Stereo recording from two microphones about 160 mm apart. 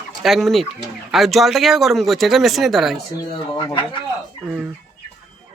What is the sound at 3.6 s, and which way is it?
Speech, 30° left (ahead or behind).